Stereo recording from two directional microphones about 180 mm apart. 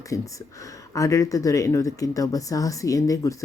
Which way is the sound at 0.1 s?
20° left (ahead or behind).